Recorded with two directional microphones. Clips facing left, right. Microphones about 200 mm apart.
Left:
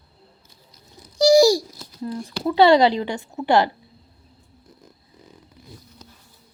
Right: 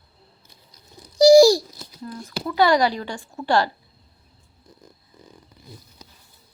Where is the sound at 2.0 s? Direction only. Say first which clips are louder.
Left 5 dB; 30° left (ahead or behind).